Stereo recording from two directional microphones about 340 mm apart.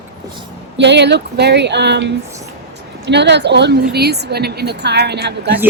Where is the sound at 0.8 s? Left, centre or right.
Right.